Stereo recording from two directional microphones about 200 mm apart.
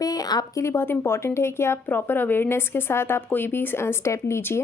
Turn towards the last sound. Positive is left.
turn(degrees=15)  # may be behind; listen again after turning